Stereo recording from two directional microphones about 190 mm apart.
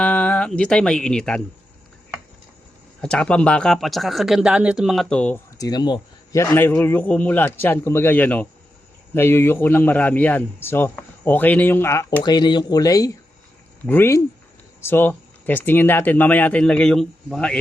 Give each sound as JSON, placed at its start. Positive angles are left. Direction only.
{"t": 0.0, "sound": "speech", "side_deg": 5}
{"t": 3.0, "sound": "speech", "side_deg": 5}
{"t": 5.5, "sound": "a man's voice", "side_deg": 20}